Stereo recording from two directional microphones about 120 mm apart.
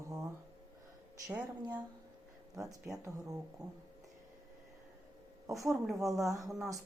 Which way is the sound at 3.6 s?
30° right (ahead or behind).